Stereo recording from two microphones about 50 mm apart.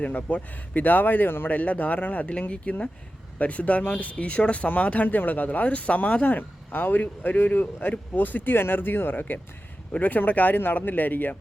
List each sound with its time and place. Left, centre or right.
0.0 s speech: left
1.5 s speech: left